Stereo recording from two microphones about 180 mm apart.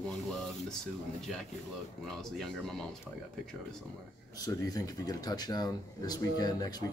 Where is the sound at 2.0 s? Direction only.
Centre (ahead or behind).